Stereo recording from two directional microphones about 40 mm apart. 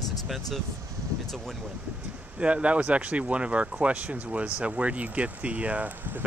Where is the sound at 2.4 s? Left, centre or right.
Right.